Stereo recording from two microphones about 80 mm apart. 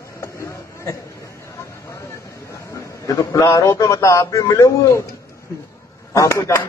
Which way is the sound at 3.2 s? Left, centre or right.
Left.